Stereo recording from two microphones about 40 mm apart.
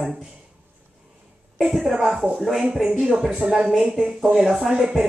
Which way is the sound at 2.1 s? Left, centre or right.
Centre.